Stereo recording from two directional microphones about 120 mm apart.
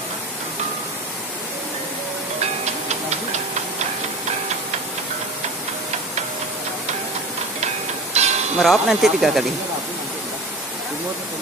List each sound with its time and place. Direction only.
7.6 s music: 65° right (ahead or behind)
8.5 s speech: 5° right (ahead or behind)